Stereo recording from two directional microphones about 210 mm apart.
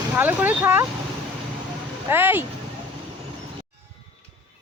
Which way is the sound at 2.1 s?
10° right (ahead or behind).